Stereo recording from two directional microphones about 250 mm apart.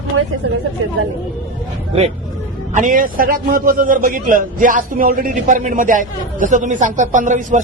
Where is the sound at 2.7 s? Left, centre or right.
Right.